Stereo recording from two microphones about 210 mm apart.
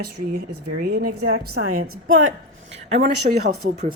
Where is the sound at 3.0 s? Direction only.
50° right (ahead or behind).